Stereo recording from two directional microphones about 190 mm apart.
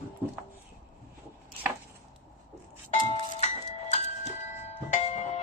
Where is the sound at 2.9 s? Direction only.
35° left (ahead or behind).